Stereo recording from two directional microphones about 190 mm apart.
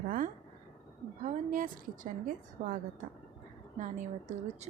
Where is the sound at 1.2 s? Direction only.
45° right (ahead or behind).